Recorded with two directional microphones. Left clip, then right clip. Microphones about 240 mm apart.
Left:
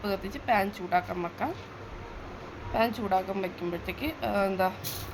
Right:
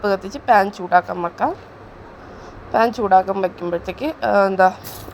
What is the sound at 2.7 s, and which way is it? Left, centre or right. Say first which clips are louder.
A woman's voice: right 13 dB; right.